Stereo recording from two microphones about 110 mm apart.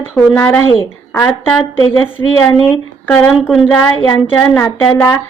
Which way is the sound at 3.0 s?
20° left (ahead or behind).